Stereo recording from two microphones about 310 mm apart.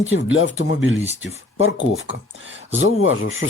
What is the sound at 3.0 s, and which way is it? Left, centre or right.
Speech, left.